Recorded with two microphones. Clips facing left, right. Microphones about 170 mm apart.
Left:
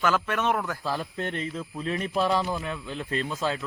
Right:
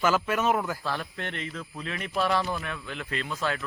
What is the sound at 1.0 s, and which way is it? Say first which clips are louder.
Speech: left 4 dB; 20° left (ahead or behind).